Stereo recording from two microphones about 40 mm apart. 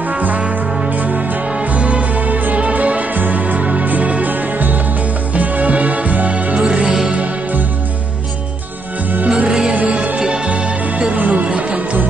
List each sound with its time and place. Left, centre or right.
1.7 s music: right
6.5 s music: centre
9.8 s music: right
11.1 s music: right
11.4 s music: right